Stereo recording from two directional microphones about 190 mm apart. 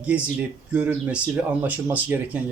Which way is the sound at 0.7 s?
5° right (ahead or behind).